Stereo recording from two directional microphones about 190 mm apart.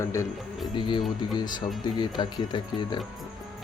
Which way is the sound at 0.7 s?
25° left (ahead or behind).